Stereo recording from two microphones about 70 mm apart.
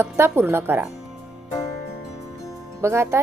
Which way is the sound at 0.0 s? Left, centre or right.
Right.